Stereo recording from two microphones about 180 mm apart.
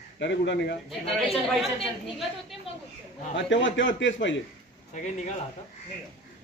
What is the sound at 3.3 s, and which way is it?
A man's voice, 90° left.